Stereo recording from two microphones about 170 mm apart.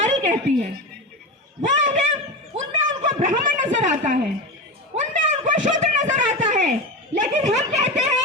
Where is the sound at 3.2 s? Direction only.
50° right (ahead or behind).